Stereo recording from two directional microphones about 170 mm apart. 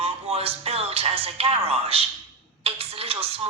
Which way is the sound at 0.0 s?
35° right (ahead or behind).